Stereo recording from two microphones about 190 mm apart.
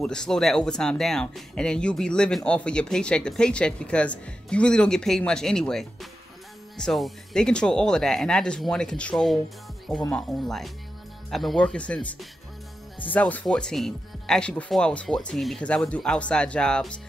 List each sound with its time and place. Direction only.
0.0 s speech: 5° left (ahead or behind)